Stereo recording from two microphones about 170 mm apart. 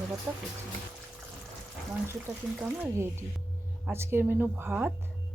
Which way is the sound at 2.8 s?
15° right (ahead or behind).